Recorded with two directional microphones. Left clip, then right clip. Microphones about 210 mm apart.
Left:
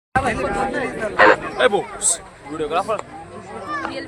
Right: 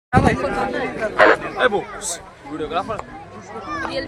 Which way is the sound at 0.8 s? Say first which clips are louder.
Even; 55° left (ahead or behind).